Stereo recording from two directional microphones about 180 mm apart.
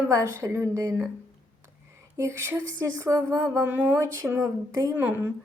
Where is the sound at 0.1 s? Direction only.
15° right (ahead or behind).